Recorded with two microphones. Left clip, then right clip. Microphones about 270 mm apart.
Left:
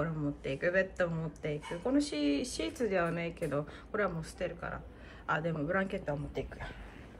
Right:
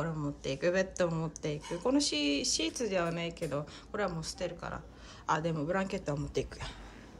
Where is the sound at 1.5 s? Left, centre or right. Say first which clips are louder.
Right 2 dB; right.